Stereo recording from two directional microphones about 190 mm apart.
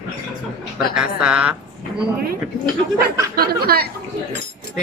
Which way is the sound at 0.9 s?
5° right (ahead or behind).